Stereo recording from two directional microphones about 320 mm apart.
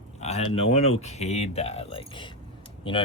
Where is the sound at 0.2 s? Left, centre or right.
Centre.